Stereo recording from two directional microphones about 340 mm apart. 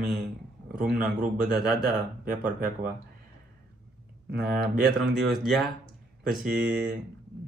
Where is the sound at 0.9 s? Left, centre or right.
Right.